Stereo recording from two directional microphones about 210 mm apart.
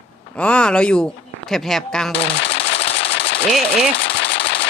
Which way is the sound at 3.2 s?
55° left (ahead or behind).